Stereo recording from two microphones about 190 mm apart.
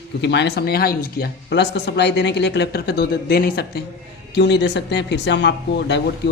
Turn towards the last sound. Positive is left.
turn(degrees=65)  # may be behind; listen again after turning